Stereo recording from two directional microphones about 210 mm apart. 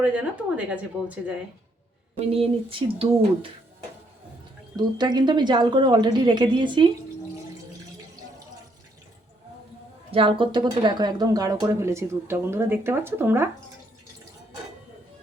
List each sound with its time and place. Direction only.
0.0 s speech: 5° right (ahead or behind)
2.3 s a woman's voice: 25° right (ahead or behind)
4.8 s a woman's voice: 20° right (ahead or behind)
10.1 s speech: 25° right (ahead or behind)